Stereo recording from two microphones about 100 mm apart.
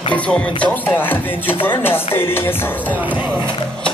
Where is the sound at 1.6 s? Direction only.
20° left (ahead or behind).